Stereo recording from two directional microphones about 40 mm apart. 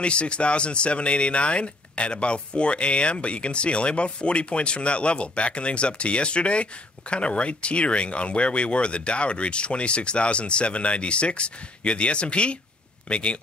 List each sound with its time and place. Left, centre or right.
0.0 s speech: left